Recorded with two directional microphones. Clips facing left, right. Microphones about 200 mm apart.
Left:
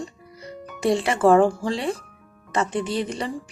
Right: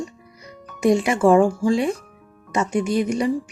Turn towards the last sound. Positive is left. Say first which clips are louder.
# right 8 dB
turn(degrees=-10)  # may be behind; listen again after turning